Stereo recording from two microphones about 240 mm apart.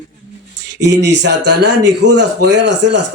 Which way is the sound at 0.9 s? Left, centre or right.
Right.